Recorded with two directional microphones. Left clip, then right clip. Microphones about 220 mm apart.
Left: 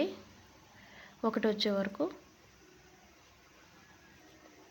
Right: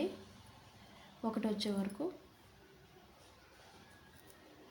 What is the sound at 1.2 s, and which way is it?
Speech, 30° left (ahead or behind).